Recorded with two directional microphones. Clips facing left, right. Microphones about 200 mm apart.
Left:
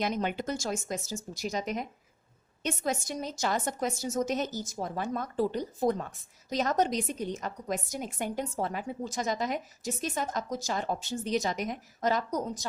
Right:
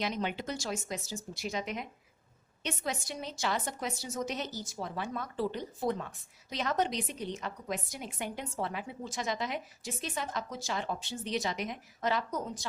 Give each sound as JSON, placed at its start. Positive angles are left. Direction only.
{"t": 0.0, "sound": "a woman's voice", "side_deg": 45}